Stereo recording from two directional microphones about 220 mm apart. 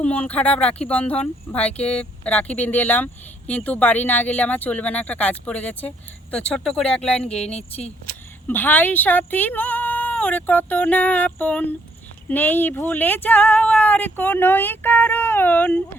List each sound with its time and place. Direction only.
0.0 s speech: 5° left (ahead or behind)
7.5 s speech: 30° left (ahead or behind)
8.4 s speech: 10° left (ahead or behind)